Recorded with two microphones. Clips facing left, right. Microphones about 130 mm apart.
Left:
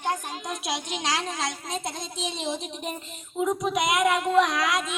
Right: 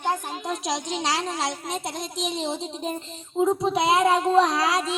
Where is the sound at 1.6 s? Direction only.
80° right.